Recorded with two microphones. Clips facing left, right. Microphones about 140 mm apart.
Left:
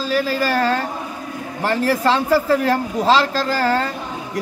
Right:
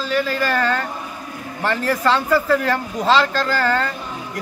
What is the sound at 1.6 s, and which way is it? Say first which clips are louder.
A man's voice: left 2 dB; 35° left (ahead or behind).